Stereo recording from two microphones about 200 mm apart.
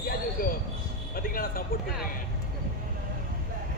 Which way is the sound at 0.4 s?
45° left (ahead or behind).